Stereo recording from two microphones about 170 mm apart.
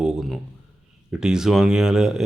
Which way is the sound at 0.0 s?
Centre (ahead or behind).